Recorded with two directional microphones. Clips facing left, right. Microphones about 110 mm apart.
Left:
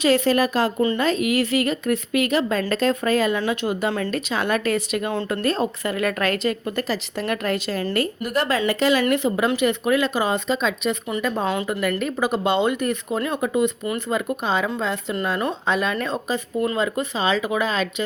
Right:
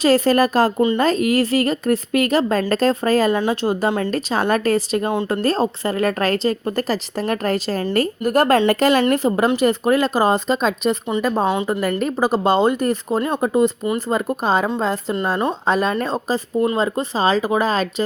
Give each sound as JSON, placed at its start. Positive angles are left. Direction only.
{"t": 0.0, "sound": "a woman's voice", "side_deg": -40}
{"t": 11.4, "sound": "speech", "side_deg": -20}
{"t": 11.7, "sound": "a woman's voice", "side_deg": -35}
{"t": 15.1, "sound": "speech", "side_deg": -25}
{"t": 15.6, "sound": "a woman's voice", "side_deg": -40}